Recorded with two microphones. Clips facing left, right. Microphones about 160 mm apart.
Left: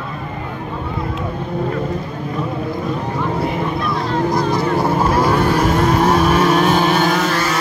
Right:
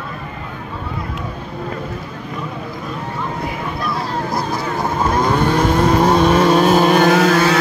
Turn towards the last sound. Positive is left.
turn(degrees=-80)